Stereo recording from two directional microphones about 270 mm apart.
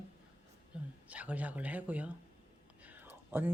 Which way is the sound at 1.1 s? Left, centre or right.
Centre.